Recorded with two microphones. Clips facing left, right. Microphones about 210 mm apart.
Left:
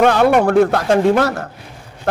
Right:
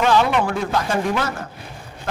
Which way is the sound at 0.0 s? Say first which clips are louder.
Left 6 dB; 55° left (ahead or behind).